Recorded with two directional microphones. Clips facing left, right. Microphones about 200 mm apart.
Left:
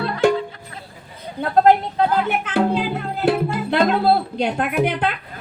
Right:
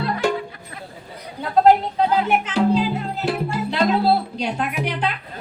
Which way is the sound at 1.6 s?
55° left (ahead or behind).